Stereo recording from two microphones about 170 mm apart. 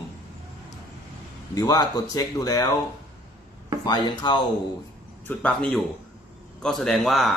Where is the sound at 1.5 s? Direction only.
20° left (ahead or behind).